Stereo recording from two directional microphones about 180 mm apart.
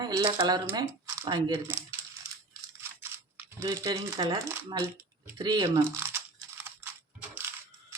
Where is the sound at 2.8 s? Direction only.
15° right (ahead or behind).